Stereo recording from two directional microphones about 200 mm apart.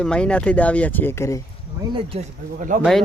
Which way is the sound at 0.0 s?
5° left (ahead or behind).